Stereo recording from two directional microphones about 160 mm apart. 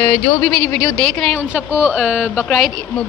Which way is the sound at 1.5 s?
10° right (ahead or behind).